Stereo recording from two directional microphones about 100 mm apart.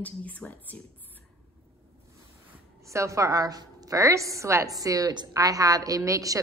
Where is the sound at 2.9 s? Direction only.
30° right (ahead or behind).